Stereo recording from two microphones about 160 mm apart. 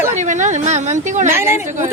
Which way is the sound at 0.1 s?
50° right (ahead or behind).